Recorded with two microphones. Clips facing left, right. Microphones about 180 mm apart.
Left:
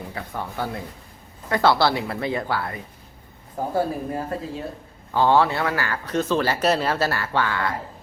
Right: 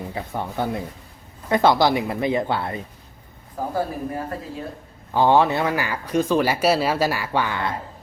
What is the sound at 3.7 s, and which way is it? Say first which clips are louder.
Speech: left 2 dB; 25° left (ahead or behind).